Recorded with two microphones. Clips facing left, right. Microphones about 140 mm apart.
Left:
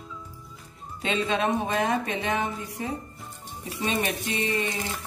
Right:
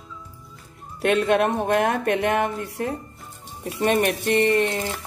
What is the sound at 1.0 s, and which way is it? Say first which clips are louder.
Speech: right 7 dB; 65° right (ahead or behind).